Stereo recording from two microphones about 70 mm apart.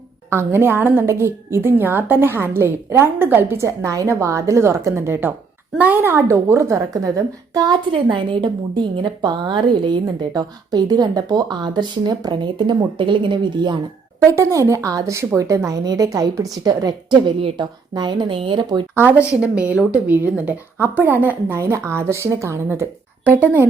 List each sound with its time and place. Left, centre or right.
0.3 s a woman's voice: right
1.0 s a woman's voice: right
3.6 s a woman's voice: right
5.7 s speech: right
6.0 s a woman's voice: right
8.7 s speech: right
9.9 s speech: right
14.3 s a woman's voice: right
15.8 s a woman's voice: right
17.6 s speech: right
18.9 s speech: right
21.5 s a woman's voice: right